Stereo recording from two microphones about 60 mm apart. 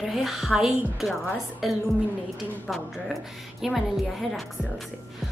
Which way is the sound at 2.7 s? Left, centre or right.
Centre.